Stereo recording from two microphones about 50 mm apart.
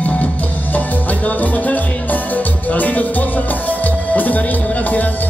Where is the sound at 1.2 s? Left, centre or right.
Left.